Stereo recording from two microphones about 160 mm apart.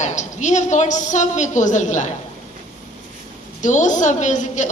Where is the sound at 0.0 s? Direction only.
50° left (ahead or behind).